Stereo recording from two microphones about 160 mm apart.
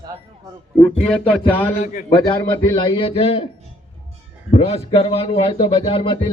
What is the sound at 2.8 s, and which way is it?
Speech, 30° left (ahead or behind).